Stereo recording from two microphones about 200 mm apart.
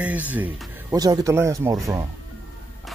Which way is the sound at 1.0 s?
20° right (ahead or behind).